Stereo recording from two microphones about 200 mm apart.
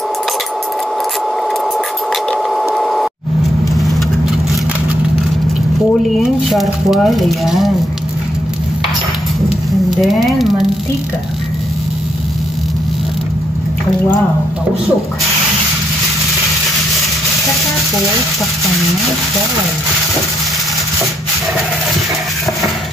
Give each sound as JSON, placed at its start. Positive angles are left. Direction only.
{"t": 2.5, "sound": "mechanisms", "side_deg": 0}
{"t": 6.0, "sound": "speech", "side_deg": 0}
{"t": 9.8, "sound": "speech", "side_deg": 0}